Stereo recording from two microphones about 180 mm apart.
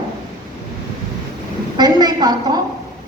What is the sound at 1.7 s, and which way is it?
Speech, 25° right (ahead or behind).